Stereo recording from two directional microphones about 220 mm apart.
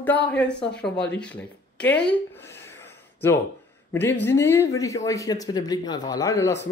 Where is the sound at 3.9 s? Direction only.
10° left (ahead or behind).